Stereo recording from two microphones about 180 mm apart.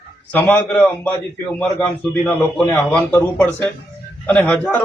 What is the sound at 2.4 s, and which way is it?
Speech, centre (ahead or behind).